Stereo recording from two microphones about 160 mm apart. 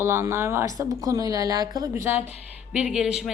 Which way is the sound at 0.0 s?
15° right (ahead or behind).